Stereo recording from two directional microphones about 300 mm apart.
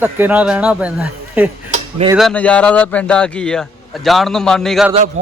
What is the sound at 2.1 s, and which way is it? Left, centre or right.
A man's voice, centre.